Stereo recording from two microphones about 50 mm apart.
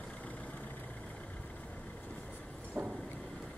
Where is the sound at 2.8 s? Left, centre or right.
Right.